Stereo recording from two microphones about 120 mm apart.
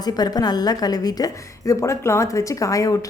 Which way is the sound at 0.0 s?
35° left (ahead or behind).